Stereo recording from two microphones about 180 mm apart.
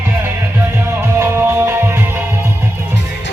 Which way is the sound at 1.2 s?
15° right (ahead or behind).